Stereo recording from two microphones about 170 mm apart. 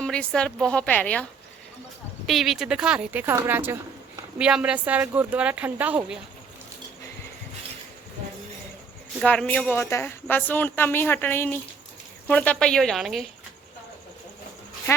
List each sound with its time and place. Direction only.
0.0 s speech: 5° left (ahead or behind)
9.2 s speech: 10° left (ahead or behind)
14.9 s speech: 15° left (ahead or behind)